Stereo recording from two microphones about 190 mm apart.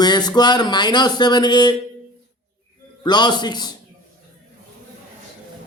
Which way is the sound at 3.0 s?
20° left (ahead or behind).